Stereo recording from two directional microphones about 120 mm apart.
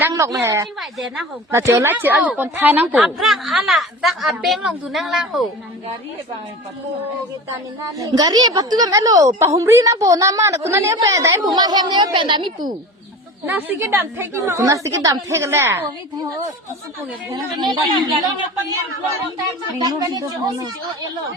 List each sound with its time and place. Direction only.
0.1 s a woman's voice: 30° right (ahead or behind)
0.8 s a woman's voice: centre (ahead or behind)
1.5 s a woman's voice: 25° right (ahead or behind)
3.2 s a woman's voice: centre (ahead or behind)
7.9 s a woman's voice: 30° right (ahead or behind)
13.4 s a woman's voice: 15° right (ahead or behind)
17.3 s a woman's voice: 35° right (ahead or behind)
19.8 s a woman's voice: 35° right (ahead or behind)